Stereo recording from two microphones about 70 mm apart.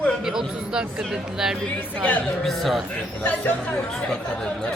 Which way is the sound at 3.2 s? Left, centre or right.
Centre.